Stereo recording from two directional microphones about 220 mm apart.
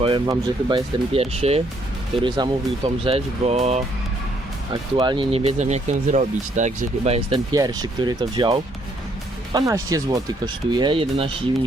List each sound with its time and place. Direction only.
0.0 s speech: 20° right (ahead or behind)